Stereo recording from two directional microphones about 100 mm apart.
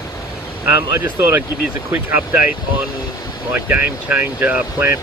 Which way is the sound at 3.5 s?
20° right (ahead or behind).